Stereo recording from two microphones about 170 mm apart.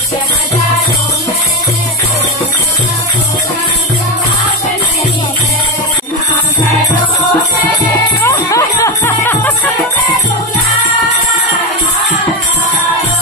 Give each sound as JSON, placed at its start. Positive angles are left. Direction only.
{"t": 8.2, "sound": "music", "side_deg": 20}